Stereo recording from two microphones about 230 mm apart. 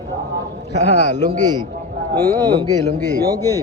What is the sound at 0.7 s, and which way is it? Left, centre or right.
Speech, left.